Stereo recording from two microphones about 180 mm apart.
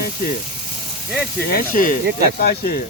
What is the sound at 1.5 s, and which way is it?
Speech, 55° left (ahead or behind).